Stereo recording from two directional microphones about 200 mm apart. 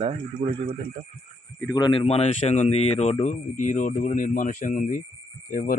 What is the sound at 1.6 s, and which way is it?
Speech, 20° left (ahead or behind).